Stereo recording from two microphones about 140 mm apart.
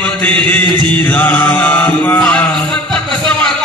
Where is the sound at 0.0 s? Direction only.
10° left (ahead or behind).